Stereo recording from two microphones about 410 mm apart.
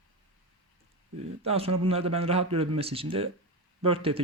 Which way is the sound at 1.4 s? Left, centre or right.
Centre.